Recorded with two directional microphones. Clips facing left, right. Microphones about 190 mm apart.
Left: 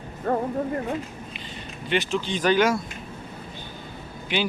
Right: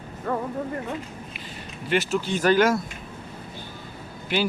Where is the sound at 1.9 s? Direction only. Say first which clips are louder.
Right 1 dB; 5° right (ahead or behind).